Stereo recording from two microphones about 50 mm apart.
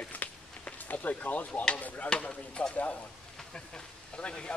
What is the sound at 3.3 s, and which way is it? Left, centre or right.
Speech, centre.